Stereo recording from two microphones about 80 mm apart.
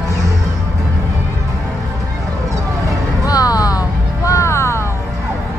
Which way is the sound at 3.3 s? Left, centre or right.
Left.